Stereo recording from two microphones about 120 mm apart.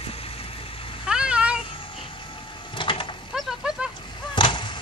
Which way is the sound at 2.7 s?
45° left (ahead or behind).